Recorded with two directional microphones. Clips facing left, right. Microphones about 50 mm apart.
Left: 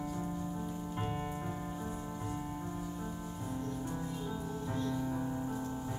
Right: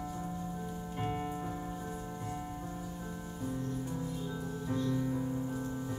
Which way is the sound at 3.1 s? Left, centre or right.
Centre.